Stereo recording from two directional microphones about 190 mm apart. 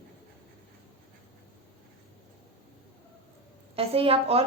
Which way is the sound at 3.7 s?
30° right (ahead or behind).